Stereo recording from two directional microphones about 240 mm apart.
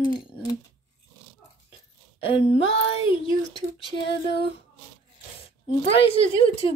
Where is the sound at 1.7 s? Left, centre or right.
Left.